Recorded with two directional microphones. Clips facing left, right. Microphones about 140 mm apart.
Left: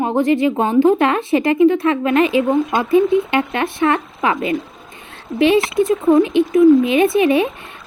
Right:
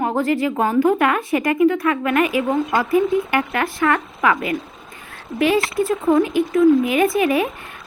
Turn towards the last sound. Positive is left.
turn(degrees=25)  # may be behind; listen again after turning